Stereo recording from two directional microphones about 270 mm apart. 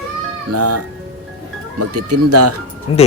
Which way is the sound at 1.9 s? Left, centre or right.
Right.